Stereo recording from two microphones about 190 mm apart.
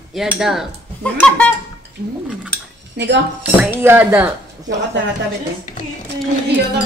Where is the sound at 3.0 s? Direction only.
65° right (ahead or behind).